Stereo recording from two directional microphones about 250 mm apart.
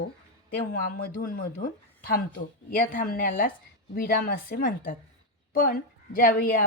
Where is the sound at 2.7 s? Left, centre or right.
Left.